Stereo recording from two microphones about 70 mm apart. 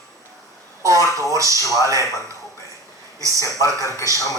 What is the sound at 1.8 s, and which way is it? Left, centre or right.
Speech, right.